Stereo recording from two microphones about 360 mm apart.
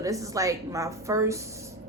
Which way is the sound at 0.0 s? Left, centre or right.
Centre.